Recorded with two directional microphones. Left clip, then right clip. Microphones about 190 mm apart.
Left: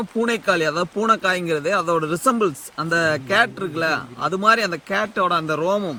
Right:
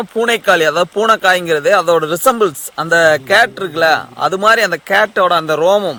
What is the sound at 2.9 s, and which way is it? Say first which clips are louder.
Speech: right 9 dB; 15° right (ahead or behind).